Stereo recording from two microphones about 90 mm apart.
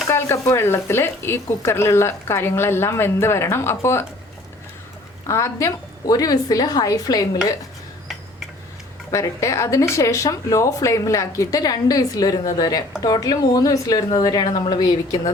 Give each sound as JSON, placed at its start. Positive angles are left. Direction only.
{"t": 0.1, "sound": "speech", "side_deg": 30}
{"t": 5.2, "sound": "speech", "side_deg": 35}
{"t": 9.1, "sound": "a woman's voice", "side_deg": 35}